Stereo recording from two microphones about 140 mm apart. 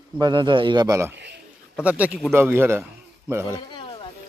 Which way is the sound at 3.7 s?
40° left (ahead or behind).